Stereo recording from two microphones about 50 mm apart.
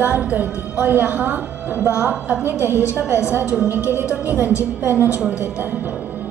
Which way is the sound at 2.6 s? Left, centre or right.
Left.